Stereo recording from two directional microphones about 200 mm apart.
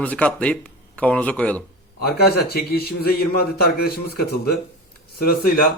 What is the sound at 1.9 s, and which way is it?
A man's voice, 50° left (ahead or behind).